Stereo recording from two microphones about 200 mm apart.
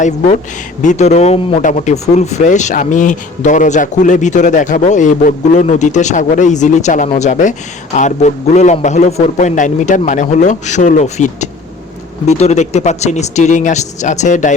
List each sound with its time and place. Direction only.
0.8 s speech: 35° left (ahead or behind)